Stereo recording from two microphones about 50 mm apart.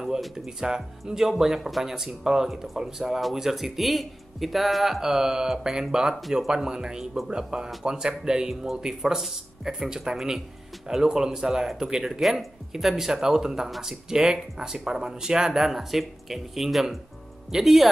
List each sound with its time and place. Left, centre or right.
0.0 s speech: centre